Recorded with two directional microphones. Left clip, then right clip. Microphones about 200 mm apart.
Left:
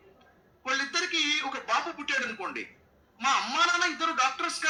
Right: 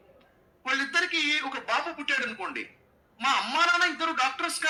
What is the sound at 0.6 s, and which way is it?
A man's voice, 20° right (ahead or behind).